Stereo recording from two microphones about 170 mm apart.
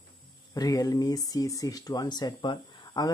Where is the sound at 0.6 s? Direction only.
20° left (ahead or behind).